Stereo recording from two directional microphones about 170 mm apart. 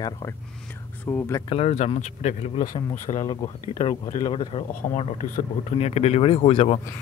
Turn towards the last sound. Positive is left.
turn(degrees=40)  # may be behind; listen again after turning